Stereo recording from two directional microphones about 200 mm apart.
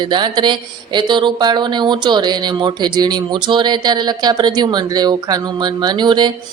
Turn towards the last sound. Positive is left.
turn(degrees=-20)  # may be behind; listen again after turning